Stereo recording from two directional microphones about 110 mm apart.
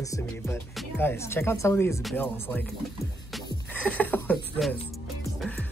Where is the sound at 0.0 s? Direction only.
30° left (ahead or behind).